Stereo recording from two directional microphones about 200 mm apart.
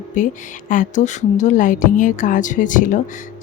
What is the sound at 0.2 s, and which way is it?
Speech, 40° left (ahead or behind).